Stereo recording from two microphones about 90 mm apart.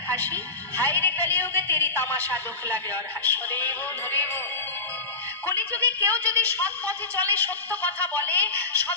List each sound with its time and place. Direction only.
0.2 s a woman's voice: 20° left (ahead or behind)
5.6 s a woman's voice: 20° left (ahead or behind)